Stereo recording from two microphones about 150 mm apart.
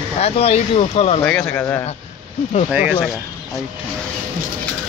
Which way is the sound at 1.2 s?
10° left (ahead or behind).